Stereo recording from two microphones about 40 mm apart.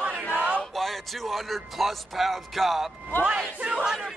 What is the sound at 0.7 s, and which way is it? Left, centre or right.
A man's voice, centre.